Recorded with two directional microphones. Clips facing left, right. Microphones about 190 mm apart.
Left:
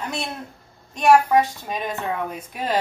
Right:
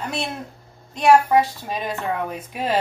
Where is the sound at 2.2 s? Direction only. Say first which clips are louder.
Right 2 dB; 5° right (ahead or behind).